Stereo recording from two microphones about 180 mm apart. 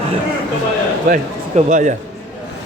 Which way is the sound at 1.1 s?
45° right (ahead or behind).